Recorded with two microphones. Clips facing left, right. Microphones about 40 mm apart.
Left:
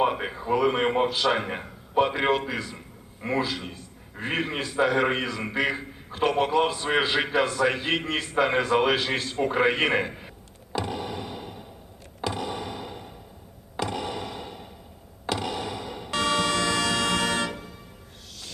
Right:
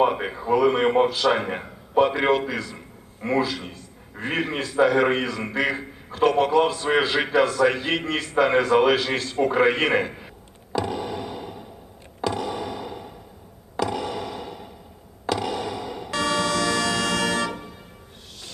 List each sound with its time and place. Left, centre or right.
0.0 s a man's voice: centre
2.7 s a sound: centre
4.2 s a man's voice: centre
10.8 s a sound: centre
15.3 s music: centre
16.0 s music: left